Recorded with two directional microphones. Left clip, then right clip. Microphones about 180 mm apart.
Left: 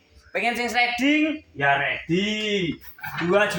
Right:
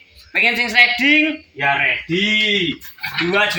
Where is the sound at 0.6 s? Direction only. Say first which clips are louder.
Right 8 dB; 20° left (ahead or behind).